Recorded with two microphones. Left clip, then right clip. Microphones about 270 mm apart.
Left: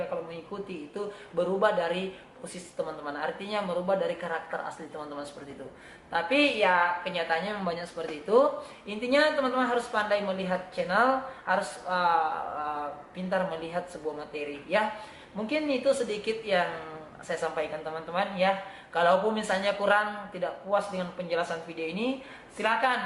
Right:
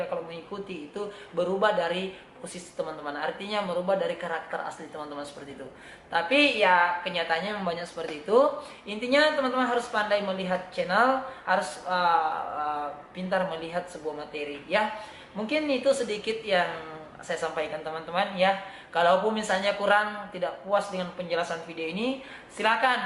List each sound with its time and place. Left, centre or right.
0.0 s a sound: centre
0.7 s speech: centre
2.7 s a woman's voice: left
3.1 s speech: centre
4.6 s a woman's voice: centre
6.1 s speech: centre